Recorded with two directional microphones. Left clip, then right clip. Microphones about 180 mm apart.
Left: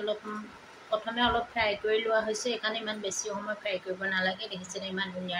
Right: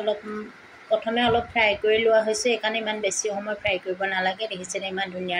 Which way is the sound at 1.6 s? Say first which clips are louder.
Right 9 dB; 15° right (ahead or behind).